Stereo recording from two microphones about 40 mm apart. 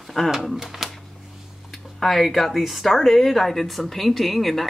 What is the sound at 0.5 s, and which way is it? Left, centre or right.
Speech, centre.